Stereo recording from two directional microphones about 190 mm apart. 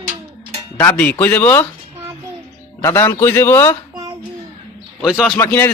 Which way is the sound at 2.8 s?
15° left (ahead or behind).